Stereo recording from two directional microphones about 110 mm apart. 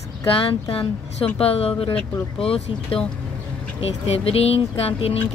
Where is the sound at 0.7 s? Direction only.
60° left (ahead or behind).